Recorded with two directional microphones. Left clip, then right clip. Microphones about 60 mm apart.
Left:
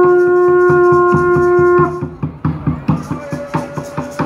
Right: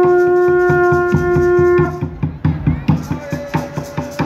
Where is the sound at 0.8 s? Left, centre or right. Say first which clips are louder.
Left 4 dB; right.